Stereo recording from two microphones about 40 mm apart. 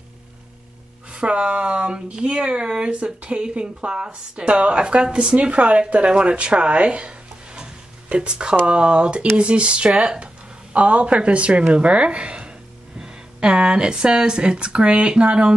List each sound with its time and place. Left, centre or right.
1.1 s speech: right
6.1 s a sound: right
8.6 s speech: right